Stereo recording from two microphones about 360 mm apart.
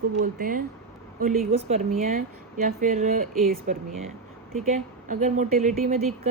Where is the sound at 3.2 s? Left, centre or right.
Centre.